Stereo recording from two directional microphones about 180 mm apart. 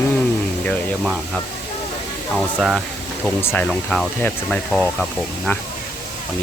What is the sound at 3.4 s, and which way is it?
Speech, 5° left (ahead or behind).